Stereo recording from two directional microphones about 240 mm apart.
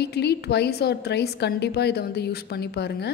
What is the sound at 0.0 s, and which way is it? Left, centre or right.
A woman's voice, left.